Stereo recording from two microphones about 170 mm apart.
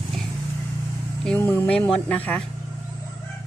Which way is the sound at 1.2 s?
10° left (ahead or behind).